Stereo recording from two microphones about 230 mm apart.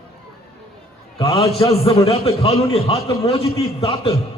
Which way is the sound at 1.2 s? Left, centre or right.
Left.